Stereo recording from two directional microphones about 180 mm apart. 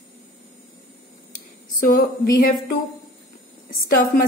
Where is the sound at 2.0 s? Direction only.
55° left (ahead or behind).